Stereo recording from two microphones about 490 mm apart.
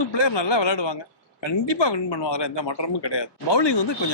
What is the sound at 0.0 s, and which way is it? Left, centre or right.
Speech, left.